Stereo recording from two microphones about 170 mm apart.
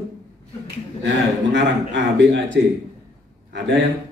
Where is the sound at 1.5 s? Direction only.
90° right.